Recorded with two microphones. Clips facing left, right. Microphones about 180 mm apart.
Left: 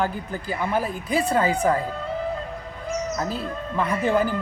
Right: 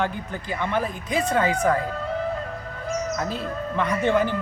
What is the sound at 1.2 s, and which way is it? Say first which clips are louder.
Speech: even; 35° left (ahead or behind).